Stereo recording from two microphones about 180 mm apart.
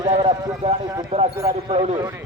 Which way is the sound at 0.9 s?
20° right (ahead or behind).